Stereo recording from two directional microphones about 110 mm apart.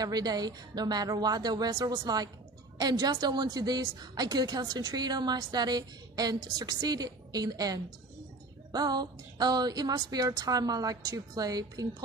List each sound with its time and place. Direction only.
0.0 s a woman's voice: 40° right (ahead or behind)